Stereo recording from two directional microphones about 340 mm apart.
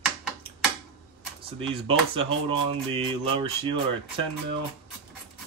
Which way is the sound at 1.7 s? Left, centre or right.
Centre.